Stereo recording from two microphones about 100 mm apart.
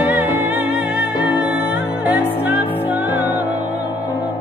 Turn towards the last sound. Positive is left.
turn(degrees=-20)  # may be behind; listen again after turning